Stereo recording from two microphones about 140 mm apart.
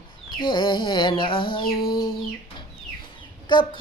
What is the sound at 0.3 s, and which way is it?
Female singing, 35° left (ahead or behind).